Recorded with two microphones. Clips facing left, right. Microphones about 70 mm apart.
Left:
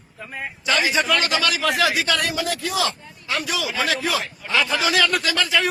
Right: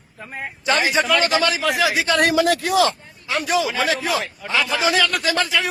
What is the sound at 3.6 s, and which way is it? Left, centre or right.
Speech, right.